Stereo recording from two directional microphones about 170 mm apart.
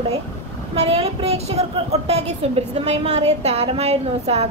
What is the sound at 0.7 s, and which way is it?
Speech, 35° right (ahead or behind).